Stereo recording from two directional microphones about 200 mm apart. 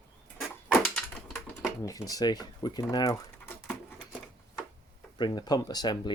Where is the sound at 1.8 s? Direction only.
15° left (ahead or behind).